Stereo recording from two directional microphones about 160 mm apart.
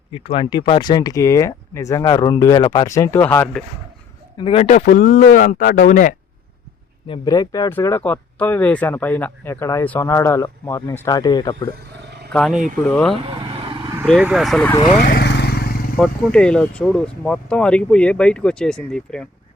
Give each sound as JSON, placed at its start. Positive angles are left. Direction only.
{"t": 0.1, "sound": "speech", "side_deg": 35}
{"t": 4.4, "sound": "speech", "side_deg": 35}
{"t": 7.1, "sound": "speech", "side_deg": 25}
{"t": 12.3, "sound": "speech", "side_deg": 5}
{"t": 13.2, "sound": "vehicle", "side_deg": -30}
{"t": 14.2, "sound": "speech", "side_deg": -5}
{"t": 14.9, "sound": "vehicle", "side_deg": 80}
{"t": 16.0, "sound": "speech", "side_deg": 5}